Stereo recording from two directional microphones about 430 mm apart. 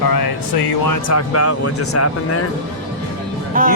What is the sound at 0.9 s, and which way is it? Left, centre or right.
Speech, left.